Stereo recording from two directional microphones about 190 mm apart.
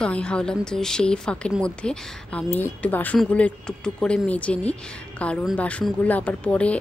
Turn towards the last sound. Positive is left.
turn(degrees=5)  # may be behind; listen again after turning